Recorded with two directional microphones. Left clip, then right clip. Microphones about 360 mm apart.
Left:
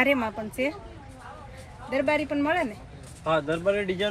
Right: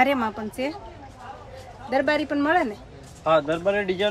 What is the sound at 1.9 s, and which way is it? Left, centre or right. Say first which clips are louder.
Speech: right 3 dB; centre.